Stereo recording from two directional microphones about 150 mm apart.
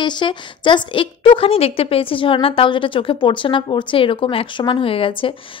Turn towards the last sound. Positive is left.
turn(degrees=35)  # may be behind; listen again after turning